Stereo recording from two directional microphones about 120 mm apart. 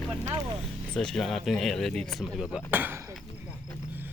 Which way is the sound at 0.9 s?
5° left (ahead or behind).